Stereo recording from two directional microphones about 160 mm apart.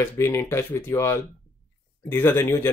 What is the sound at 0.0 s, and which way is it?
Speech, 15° left (ahead or behind).